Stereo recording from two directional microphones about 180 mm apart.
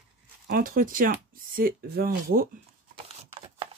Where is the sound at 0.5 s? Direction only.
50° right (ahead or behind).